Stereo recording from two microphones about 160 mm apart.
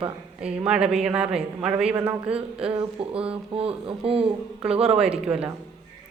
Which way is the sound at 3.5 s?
35° right (ahead or behind).